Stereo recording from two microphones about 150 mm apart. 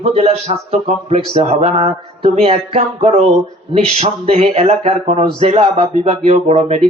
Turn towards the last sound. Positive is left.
turn(degrees=-50)  # may be behind; listen again after turning